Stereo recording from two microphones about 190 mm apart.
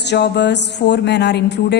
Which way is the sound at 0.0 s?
65° left (ahead or behind).